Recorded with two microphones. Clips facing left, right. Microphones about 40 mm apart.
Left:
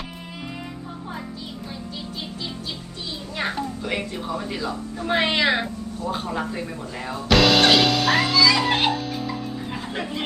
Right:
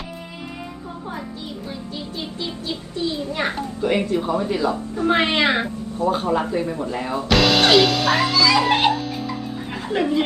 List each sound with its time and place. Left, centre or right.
3.2 s a woman's voice: right
7.3 s music: centre
9.9 s speech: right